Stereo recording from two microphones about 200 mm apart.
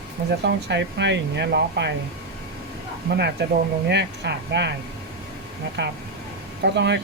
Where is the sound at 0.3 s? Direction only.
60° right (ahead or behind).